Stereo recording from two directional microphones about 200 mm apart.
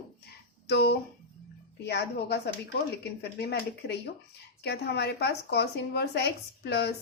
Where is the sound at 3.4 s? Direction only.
55° left (ahead or behind).